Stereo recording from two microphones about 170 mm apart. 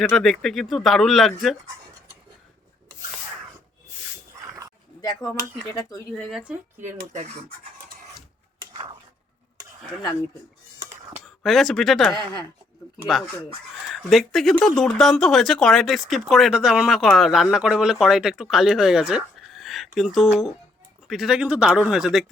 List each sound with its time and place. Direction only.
0.0 s speech: centre (ahead or behind)
4.4 s a sound: 20° right (ahead or behind)
4.9 s speech: 20° left (ahead or behind)
6.1 s speech: 5° left (ahead or behind)
6.9 s scratch: 45° right (ahead or behind)
11.4 s speech: centre (ahead or behind)
12.1 s speech: 25° left (ahead or behind)
13.8 s speech: centre (ahead or behind)